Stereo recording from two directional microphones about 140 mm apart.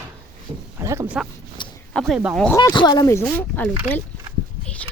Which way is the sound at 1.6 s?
35° left (ahead or behind).